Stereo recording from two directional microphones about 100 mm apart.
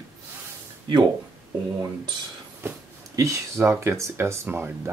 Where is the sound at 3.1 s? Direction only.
30° right (ahead or behind).